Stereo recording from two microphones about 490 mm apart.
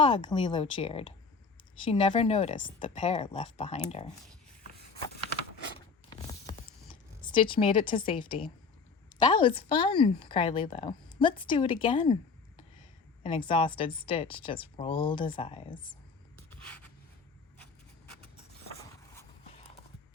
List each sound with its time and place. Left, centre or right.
0.0 s speech: centre
4.6 s a sound: centre
7.2 s speech: centre
13.2 s speech: centre
18.7 s clip-clop: centre